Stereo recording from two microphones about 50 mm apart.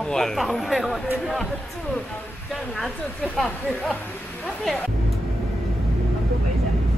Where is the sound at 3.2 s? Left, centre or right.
Centre.